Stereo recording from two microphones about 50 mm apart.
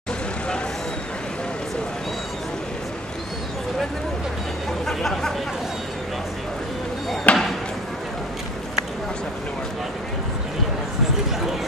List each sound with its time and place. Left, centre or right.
4.8 s speech: centre
7.3 s basketball bounce: left